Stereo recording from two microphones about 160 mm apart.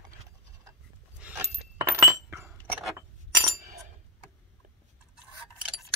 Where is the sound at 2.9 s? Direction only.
20° right (ahead or behind).